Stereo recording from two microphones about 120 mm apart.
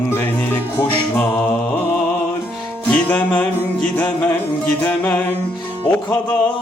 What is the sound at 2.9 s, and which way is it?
Music, 15° left (ahead or behind).